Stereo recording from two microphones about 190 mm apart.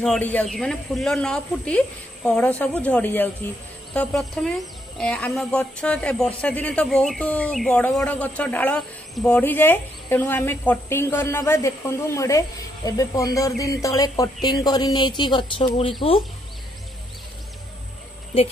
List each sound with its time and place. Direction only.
0.0 s speech: 5° left (ahead or behind); by 15.9 s 25° left (ahead or behind)